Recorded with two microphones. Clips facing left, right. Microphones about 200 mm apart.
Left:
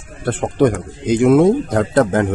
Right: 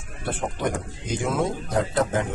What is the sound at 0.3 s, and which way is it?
Speech, 80° left.